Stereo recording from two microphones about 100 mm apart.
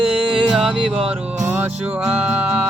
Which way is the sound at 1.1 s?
20° right (ahead or behind).